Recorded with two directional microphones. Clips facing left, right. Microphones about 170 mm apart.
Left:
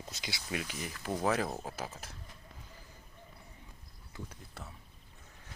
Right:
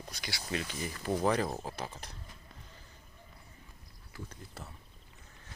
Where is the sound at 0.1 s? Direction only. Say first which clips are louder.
Right 2 dB; 20° left (ahead or behind).